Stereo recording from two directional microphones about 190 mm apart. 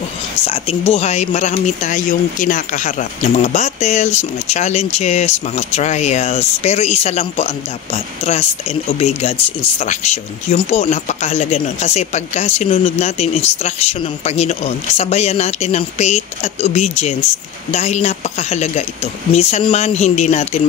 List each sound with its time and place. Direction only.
0.5 s speech: 30° left (ahead or behind)